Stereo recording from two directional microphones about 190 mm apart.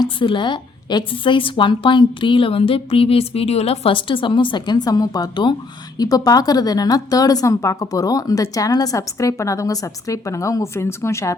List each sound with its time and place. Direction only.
0.0 s a woman's voice: 25° left (ahead or behind)